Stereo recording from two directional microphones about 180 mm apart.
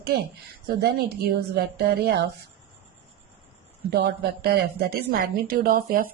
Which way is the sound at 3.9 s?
65° right (ahead or behind).